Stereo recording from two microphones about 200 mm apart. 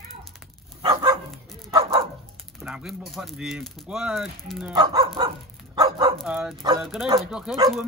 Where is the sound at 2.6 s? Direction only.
5° right (ahead or behind).